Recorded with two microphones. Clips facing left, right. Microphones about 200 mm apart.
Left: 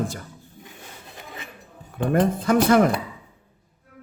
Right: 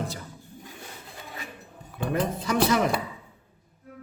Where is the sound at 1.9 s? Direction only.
50° left (ahead or behind).